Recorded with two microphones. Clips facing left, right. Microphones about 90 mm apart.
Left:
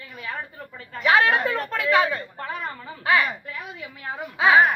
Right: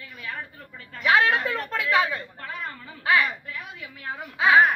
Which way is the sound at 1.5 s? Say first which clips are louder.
Left 3 dB; 20° left (ahead or behind).